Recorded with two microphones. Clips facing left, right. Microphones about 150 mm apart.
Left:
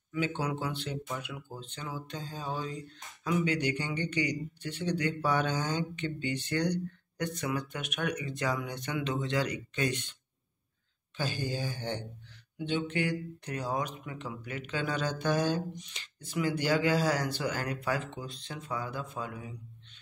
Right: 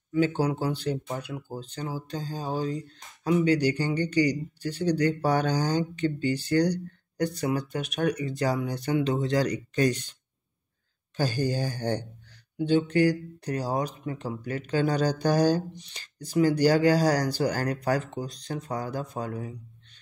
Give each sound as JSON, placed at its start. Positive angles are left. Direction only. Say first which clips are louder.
{"t": 0.1, "sound": "speech", "louder": "right 8 dB", "side_deg": -35}
{"t": 11.1, "sound": "speech", "louder": "right 7 dB", "side_deg": -40}